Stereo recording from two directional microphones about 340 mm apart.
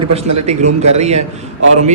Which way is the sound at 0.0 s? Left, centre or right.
Centre.